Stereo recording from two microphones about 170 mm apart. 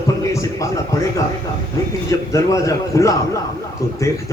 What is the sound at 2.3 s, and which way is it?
Speech, 20° left (ahead or behind).